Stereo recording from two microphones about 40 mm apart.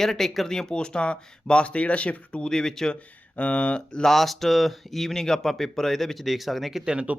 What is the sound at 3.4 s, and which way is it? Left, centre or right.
Speech, left.